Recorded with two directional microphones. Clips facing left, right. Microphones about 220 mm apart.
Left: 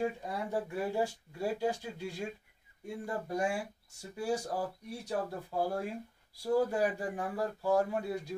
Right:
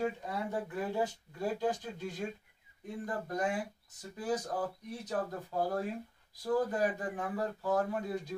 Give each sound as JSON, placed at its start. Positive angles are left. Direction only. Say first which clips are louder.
{"t": 0.0, "sound": "speech", "louder": "even", "side_deg": 10}